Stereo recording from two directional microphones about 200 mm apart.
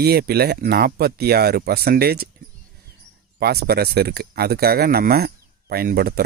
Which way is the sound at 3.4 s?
50° right (ahead or behind).